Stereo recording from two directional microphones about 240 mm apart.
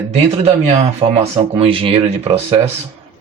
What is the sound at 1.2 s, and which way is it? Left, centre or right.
Speech, right.